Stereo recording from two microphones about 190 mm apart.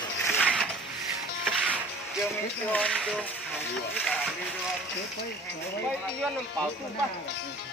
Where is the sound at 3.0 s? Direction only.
5° right (ahead or behind).